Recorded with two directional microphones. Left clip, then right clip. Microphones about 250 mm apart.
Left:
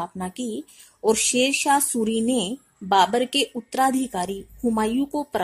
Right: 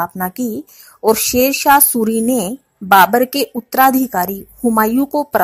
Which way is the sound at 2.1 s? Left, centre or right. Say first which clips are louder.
Right 6 dB; right.